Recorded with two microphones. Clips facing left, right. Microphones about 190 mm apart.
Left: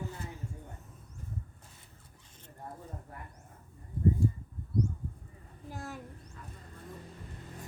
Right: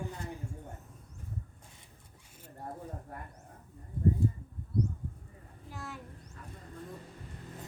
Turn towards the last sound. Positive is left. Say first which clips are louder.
# left 2 dB
turn(degrees=45)  # may be behind; listen again after turning